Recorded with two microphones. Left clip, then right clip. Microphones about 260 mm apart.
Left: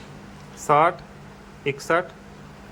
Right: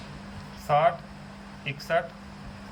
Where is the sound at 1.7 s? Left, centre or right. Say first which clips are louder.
Left 5 dB; left.